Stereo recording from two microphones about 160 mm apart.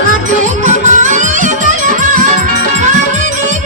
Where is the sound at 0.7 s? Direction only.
50° right (ahead or behind).